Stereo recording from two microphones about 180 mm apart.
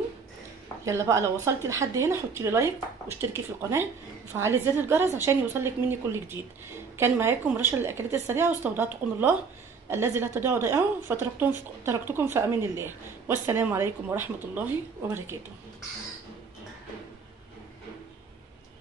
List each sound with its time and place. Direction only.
0.8 s a woman's voice: 15° right (ahead or behind)
4.3 s a woman's voice: 15° right (ahead or behind)